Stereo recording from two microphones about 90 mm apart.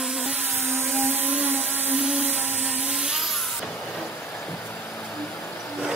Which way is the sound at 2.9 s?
5° right (ahead or behind).